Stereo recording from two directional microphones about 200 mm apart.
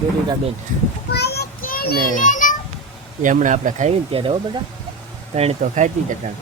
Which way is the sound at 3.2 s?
40° right (ahead or behind).